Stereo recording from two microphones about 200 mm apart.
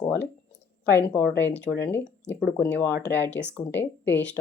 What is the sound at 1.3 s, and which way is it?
Speech, 10° left (ahead or behind).